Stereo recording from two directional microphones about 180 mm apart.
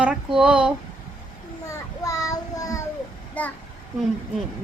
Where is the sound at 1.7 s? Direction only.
20° left (ahead or behind).